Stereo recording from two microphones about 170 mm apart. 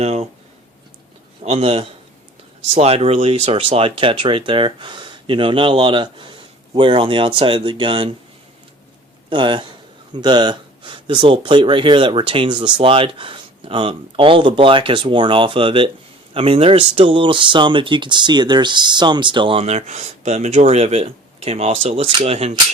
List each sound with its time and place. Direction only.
0.0 s speech: 40° right (ahead or behind)
1.5 s speech: 35° right (ahead or behind)
9.3 s speech: 30° right (ahead or behind)